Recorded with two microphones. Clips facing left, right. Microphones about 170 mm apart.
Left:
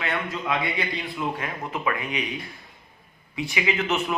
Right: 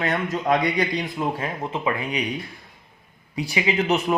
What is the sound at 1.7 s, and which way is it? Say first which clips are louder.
Speech: right 1 dB; 30° right (ahead or behind).